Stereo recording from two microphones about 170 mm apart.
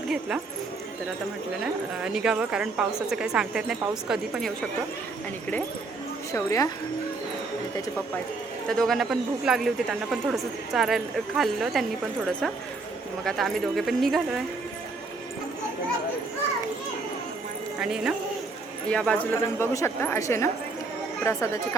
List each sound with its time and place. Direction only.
0.1 s speech: 5° right (ahead or behind)
1.6 s speech: 5° right (ahead or behind)
6.3 s speech: 20° left (ahead or behind)
8.7 s speech: centre (ahead or behind)
17.7 s speech: 5° right (ahead or behind); by 21.8 s 15° left (ahead or behind)